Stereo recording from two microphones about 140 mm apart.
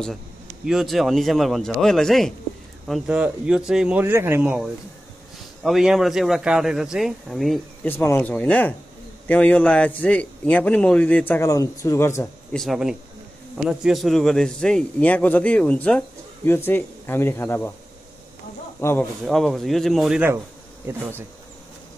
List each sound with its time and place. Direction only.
0.7 s a man's voice: centre (ahead or behind)
4.0 s a man's voice: 15° right (ahead or behind); by 7.6 s centre (ahead or behind)
7.8 s a man's voice: 15° left (ahead or behind)
12.5 s a man's voice: centre (ahead or behind); by 17.7 s 15° left (ahead or behind)
18.8 s speech: 20° left (ahead or behind)
19.2 s a man's voice: centre (ahead or behind)
20.9 s speech: 20° right (ahead or behind)